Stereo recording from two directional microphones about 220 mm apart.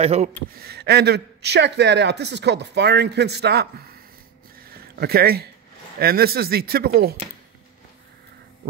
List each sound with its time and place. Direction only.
0.0 s speech: 30° right (ahead or behind)
0.5 s speech: 45° right (ahead or behind)
4.6 s a sound: 45° right (ahead or behind)
5.9 s speech: 45° right (ahead or behind)